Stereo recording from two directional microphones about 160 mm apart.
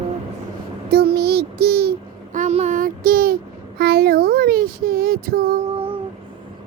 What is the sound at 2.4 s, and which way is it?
Child singing, 45° right (ahead or behind).